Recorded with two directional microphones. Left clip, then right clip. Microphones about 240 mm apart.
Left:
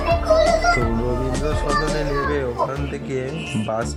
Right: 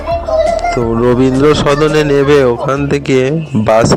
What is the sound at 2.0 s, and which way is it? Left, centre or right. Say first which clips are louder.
Speech: right 14 dB; right.